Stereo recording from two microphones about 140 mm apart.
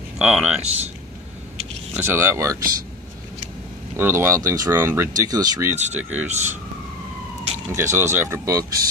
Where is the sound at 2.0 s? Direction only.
15° right (ahead or behind).